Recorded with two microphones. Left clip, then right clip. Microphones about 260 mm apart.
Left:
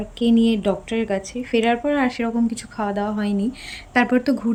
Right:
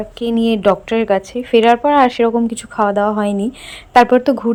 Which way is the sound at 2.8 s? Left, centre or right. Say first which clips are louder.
Right 10 dB; right.